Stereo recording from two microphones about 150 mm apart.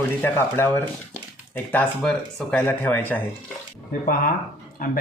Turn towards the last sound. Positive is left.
turn(degrees=70)  # may be behind; listen again after turning